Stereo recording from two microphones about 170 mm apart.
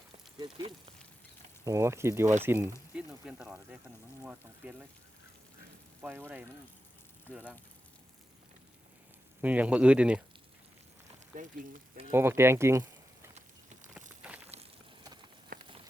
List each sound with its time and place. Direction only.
0.3 s speech: 25° right (ahead or behind); by 4.9 s 10° right (ahead or behind)
6.0 s speech: 10° right (ahead or behind)
7.3 s speech: 10° left (ahead or behind)
9.4 s speech: 10° right (ahead or behind)
11.4 s speech: 50° right (ahead or behind)
12.1 s speech: 15° right (ahead or behind)
13.3 s a sound: 45° right (ahead or behind)
14.2 s a sound: 10° right (ahead or behind)
15.5 s a sound: 55° right (ahead or behind)